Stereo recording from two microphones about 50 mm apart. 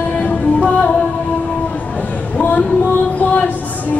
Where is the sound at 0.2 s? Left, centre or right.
Left.